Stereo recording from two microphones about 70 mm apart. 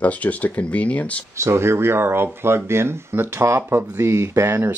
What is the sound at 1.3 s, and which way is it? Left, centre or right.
Speech, right.